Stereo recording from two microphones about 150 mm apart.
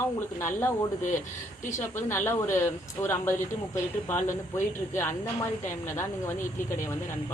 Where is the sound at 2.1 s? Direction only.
15° left (ahead or behind).